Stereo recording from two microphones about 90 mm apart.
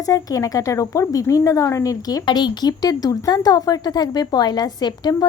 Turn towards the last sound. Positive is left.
turn(degrees=50)  # may be behind; listen again after turning